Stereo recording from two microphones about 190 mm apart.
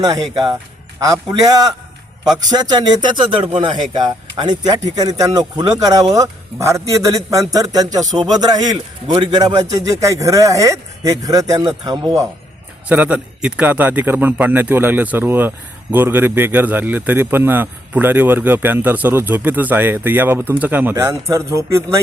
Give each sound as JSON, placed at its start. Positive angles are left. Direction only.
{"t": 0.0, "sound": "a man's voice", "side_deg": -20}